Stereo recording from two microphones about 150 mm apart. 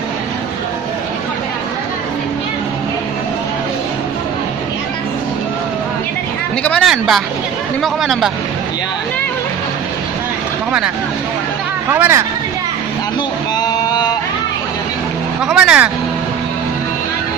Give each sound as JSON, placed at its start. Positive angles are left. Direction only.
{"t": 6.6, "sound": "a sound", "side_deg": 10}
{"t": 6.9, "sound": "speech", "side_deg": 0}
{"t": 11.9, "sound": "speech", "side_deg": -15}
{"t": 13.6, "sound": "sheep", "side_deg": 25}
{"t": 15.4, "sound": "speech", "side_deg": -5}